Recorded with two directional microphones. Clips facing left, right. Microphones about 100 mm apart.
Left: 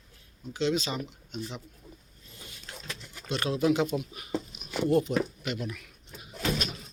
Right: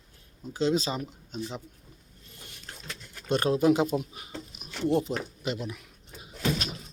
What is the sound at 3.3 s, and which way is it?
Speech, 45° right (ahead or behind).